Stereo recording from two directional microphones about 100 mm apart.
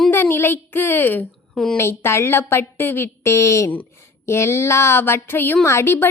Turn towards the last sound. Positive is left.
turn(degrees=25)  # may be behind; listen again after turning